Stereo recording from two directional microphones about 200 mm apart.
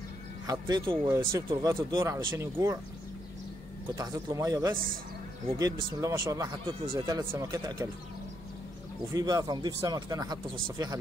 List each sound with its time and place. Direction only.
0.5 s speech: 20° right (ahead or behind)
3.9 s speech: 20° right (ahead or behind)
9.1 s speech: 20° right (ahead or behind)